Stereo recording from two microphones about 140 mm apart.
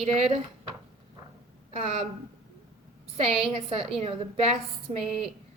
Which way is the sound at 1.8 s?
50° right (ahead or behind).